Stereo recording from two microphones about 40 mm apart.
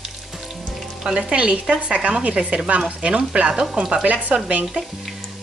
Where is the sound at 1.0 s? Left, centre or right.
Right.